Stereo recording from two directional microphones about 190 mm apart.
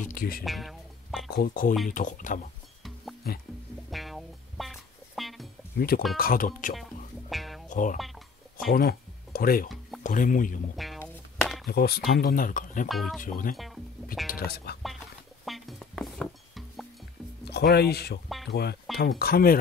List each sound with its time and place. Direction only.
0.1 s speech: 50° left (ahead or behind)
0.4 s music: centre (ahead or behind)
1.3 s speech: 50° left (ahead or behind)
3.9 s music: centre (ahead or behind)
5.8 s speech: 50° left (ahead or behind)
6.7 s music: centre (ahead or behind)
7.7 s speech: 45° left (ahead or behind)
11.0 s a sound: centre (ahead or behind)
11.6 s speech: 55° left (ahead or behind)
12.8 s speech: centre (ahead or behind)
13.2 s speech: 45° left (ahead or behind)
15.4 s music: centre (ahead or behind)
17.5 s speech: 60° left (ahead or behind)